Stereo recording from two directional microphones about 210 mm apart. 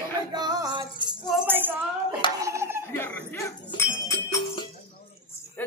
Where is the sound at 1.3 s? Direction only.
5° right (ahead or behind).